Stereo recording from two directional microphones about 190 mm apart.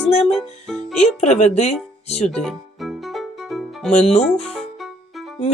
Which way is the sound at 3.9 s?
35° left (ahead or behind).